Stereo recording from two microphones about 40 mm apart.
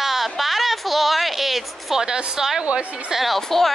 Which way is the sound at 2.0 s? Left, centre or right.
Centre.